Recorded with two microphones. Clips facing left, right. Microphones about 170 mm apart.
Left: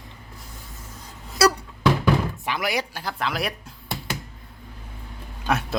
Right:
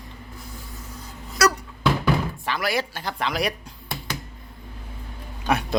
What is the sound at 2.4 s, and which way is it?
Speech, 15° left (ahead or behind).